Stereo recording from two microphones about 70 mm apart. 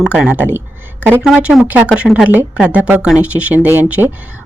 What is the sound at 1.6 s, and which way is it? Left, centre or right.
A woman's voice, centre.